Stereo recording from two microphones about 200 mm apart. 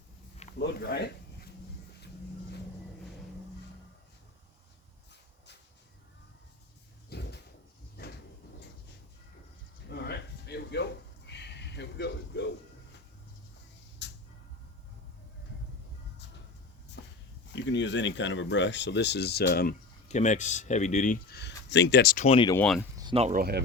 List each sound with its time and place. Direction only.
0.6 s speech: 55° left (ahead or behind)
7.1 s a sound: 55° left (ahead or behind)
8.0 s cupboard open or close: 55° left (ahead or behind)
9.9 s a sound: 55° left (ahead or behind)
14.0 s a sound: 60° left (ahead or behind)
17.0 s walk: 60° left (ahead or behind)
17.5 s speech: 65° left (ahead or behind)
20.1 s speech: 35° left (ahead or behind)
21.3 s speech: 60° left (ahead or behind)
22.3 s speech: 25° left (ahead or behind)
22.5 s speech: 5° left (ahead or behind)
22.8 s a sound: 20° right (ahead or behind)
23.1 s speech: 30° right (ahead or behind)
23.4 s speech: 50° right (ahead or behind)